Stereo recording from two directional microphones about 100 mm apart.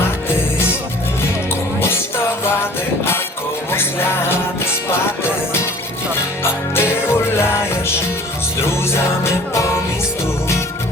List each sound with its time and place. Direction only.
2.4 s music: 25° left (ahead or behind)
6.4 s music: 25° left (ahead or behind)
8.6 s music: 25° left (ahead or behind)